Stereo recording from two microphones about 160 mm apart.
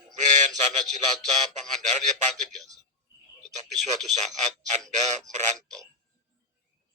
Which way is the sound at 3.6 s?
45° right (ahead or behind).